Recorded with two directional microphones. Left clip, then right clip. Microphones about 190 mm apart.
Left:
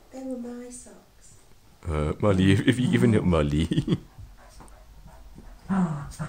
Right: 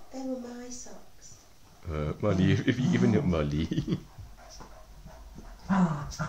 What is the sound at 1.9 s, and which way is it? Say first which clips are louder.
Speech: left 6 dB; 50° left (ahead or behind).